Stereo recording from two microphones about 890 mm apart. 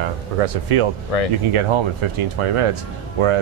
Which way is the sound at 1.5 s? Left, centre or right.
Right.